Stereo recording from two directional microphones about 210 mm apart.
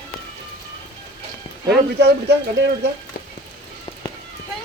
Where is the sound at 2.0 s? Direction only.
55° right (ahead or behind).